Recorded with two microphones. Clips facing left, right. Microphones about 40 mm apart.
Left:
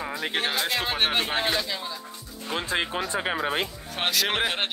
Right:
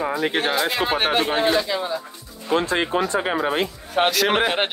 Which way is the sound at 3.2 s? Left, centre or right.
Centre.